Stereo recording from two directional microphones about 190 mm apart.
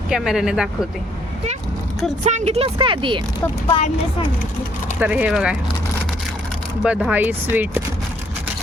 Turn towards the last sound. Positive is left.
turn(degrees=-10)  # may be behind; listen again after turning